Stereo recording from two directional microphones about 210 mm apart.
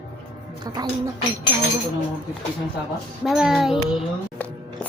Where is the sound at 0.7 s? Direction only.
20° right (ahead or behind).